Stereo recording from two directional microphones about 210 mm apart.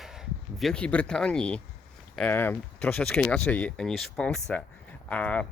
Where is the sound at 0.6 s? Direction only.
5° left (ahead or behind).